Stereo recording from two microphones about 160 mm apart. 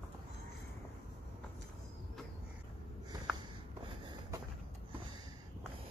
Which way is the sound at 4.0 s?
30° right (ahead or behind).